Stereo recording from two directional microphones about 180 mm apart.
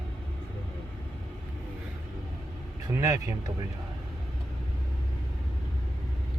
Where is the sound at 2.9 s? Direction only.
15° right (ahead or behind).